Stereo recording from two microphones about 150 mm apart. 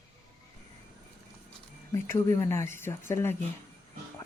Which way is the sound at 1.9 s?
20° left (ahead or behind).